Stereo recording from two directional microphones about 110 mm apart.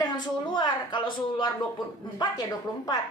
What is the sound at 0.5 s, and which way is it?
A woman's voice, 45° left (ahead or behind).